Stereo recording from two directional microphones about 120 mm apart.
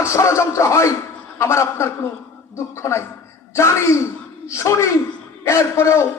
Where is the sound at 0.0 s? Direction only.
25° left (ahead or behind).